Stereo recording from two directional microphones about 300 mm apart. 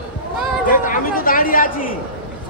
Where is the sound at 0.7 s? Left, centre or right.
Left.